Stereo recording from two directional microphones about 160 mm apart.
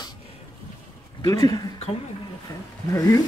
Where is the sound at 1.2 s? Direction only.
25° left (ahead or behind).